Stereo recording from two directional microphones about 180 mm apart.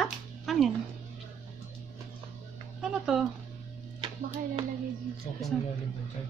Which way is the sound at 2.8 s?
5° right (ahead or behind).